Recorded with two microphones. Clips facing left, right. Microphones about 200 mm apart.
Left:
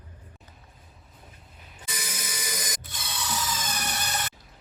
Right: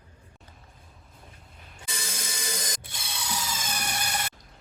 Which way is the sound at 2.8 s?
10° right (ahead or behind).